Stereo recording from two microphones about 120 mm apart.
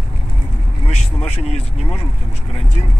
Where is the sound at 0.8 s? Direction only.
65° left (ahead or behind).